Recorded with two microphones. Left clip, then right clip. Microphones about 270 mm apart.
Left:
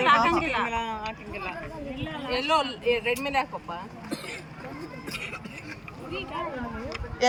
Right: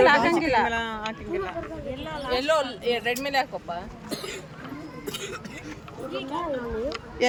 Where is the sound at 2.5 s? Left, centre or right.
Right.